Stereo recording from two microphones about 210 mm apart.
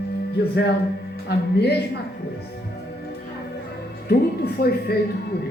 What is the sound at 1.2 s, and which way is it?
Speech, 50° left (ahead or behind).